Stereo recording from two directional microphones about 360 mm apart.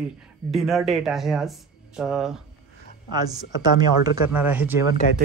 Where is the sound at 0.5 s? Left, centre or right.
Centre.